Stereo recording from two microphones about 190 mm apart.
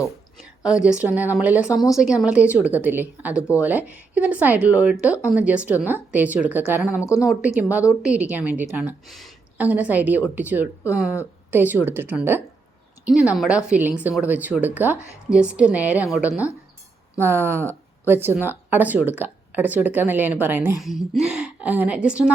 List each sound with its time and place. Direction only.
0.8 s speech: 5° right (ahead or behind)
7.0 s a woman's voice: 15° left (ahead or behind)
7.3 s a woman's voice: 5° right (ahead or behind)